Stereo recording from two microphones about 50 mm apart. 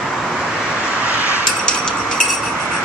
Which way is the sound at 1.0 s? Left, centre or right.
Right.